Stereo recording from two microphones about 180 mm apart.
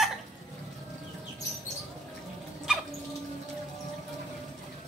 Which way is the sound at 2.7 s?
5° right (ahead or behind).